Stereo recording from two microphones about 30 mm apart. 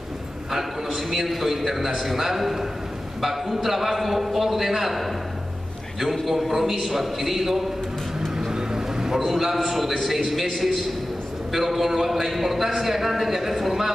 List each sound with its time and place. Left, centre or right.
1.2 s a man's voice: centre
6.5 s a man's voice: centre
8.4 s a sound: right
9.2 s a man's voice: centre